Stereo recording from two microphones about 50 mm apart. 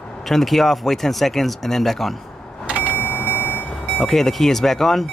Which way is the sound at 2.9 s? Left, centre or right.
Left.